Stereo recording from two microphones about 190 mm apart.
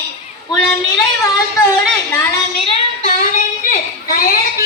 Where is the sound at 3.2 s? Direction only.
45° left (ahead or behind).